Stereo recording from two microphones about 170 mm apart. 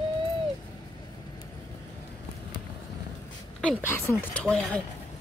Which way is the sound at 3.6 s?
15° left (ahead or behind).